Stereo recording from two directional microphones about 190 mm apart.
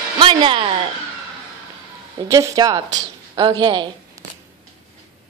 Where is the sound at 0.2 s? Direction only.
25° right (ahead or behind).